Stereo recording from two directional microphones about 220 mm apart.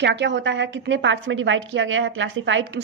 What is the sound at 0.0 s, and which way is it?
A woman's voice, 55° right (ahead or behind).